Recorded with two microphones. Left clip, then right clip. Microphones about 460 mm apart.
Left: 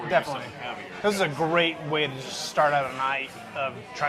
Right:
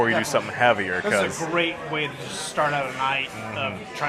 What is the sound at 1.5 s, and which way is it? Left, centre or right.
Speech, left.